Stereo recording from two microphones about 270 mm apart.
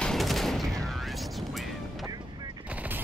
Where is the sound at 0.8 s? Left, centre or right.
Centre.